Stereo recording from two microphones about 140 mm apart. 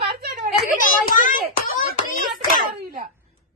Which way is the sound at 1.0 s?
70° left (ahead or behind).